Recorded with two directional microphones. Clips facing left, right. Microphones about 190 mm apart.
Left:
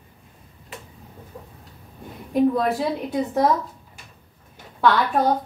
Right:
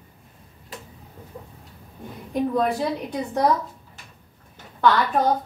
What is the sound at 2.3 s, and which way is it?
A woman's voice, centre (ahead or behind).